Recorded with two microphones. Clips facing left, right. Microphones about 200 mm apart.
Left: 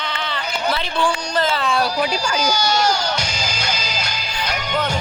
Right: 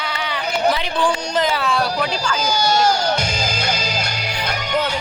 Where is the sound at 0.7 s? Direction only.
15° right (ahead or behind).